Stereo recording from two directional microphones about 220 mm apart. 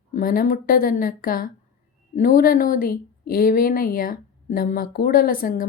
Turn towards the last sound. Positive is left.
turn(degrees=40)  # may be behind; listen again after turning